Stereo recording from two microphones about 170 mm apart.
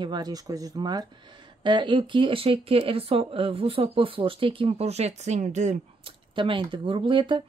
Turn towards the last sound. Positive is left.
turn(degrees=-30)  # may be behind; listen again after turning